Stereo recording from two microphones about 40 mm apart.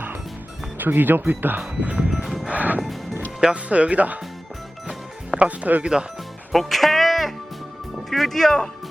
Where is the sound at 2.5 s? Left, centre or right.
Right.